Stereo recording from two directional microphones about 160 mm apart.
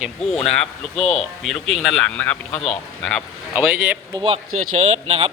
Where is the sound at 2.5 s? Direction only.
40° left (ahead or behind).